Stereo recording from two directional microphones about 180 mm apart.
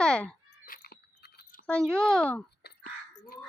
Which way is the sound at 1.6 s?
5° left (ahead or behind).